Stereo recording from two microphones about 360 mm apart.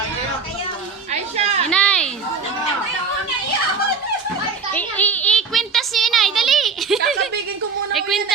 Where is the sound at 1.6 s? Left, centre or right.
Centre.